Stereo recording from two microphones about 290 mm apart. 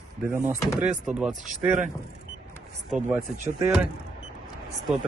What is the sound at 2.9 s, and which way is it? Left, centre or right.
Speech, centre.